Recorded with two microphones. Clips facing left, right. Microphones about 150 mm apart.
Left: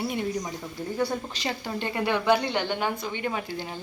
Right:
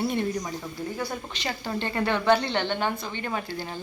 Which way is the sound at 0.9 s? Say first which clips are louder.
Left 4 dB; 30° left (ahead or behind).